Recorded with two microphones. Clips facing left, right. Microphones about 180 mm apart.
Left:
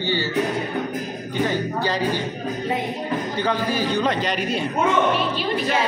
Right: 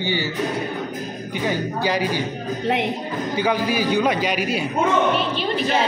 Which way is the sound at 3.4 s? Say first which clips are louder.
Right 3 dB; 10° right (ahead or behind).